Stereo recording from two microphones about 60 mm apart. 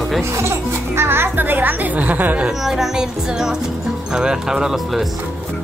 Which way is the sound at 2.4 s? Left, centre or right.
Centre.